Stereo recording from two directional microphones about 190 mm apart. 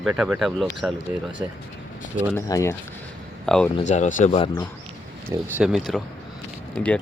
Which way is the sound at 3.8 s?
40° left (ahead or behind).